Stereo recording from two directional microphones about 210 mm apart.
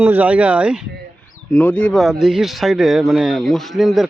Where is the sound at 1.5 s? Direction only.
5° left (ahead or behind).